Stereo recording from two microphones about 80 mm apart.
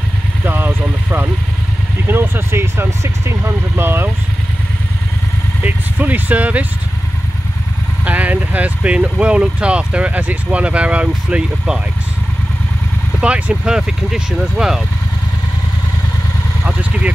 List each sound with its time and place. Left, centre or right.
0.5 s speech: right
5.6 s speech: right
8.0 s speech: centre
13.2 s speech: centre
16.6 s vehicle: centre